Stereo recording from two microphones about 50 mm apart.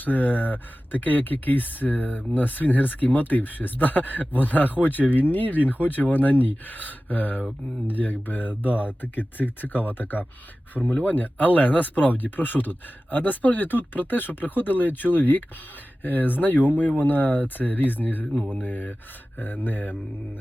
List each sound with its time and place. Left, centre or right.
0.0 s speech: left
8.7 s speech: right
9.0 s speech: left